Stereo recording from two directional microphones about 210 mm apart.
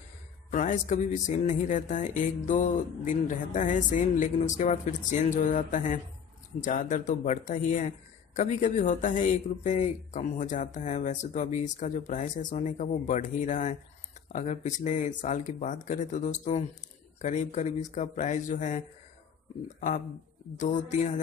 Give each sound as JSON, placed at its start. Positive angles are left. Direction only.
{"t": 0.5, "sound": "speech", "side_deg": 35}
{"t": 20.5, "sound": "speech", "side_deg": 35}